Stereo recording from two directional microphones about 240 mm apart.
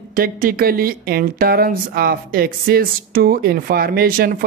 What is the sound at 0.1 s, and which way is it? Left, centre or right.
Speech, right.